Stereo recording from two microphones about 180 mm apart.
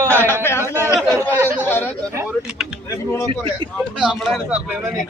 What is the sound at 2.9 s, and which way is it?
Speech, 15° left (ahead or behind).